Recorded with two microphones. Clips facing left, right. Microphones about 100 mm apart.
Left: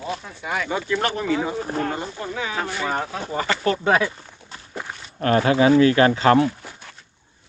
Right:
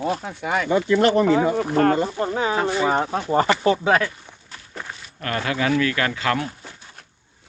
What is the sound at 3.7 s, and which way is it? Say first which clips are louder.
Speech: even; centre (ahead or behind).